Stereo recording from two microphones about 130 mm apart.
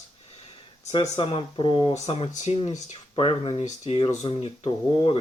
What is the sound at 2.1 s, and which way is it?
Speech, 50° left (ahead or behind).